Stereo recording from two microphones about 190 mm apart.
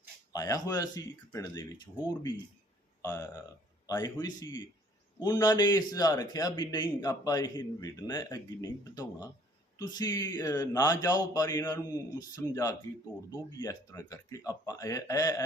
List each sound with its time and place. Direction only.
0.3 s a man's voice: 15° left (ahead or behind)